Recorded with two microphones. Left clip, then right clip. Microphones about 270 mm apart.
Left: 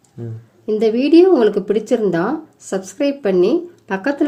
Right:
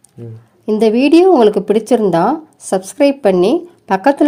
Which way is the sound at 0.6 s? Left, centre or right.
Right.